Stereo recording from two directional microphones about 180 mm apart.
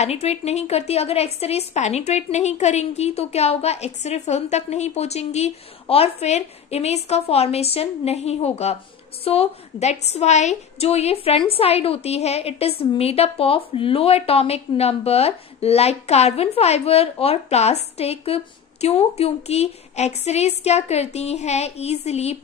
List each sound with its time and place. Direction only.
0.0 s a woman's voice: 35° left (ahead or behind)